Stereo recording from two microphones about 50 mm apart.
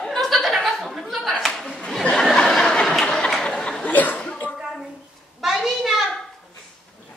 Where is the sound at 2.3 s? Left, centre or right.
Centre.